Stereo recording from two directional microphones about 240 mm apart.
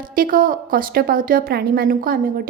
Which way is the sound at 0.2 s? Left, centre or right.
Right.